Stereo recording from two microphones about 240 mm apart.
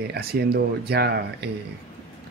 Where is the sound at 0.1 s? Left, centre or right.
Right.